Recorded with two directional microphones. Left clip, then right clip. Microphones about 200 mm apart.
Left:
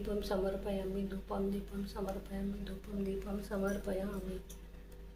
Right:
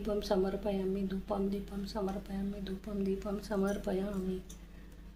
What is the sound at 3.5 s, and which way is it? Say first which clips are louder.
Speech: right 3 dB; 55° right (ahead or behind).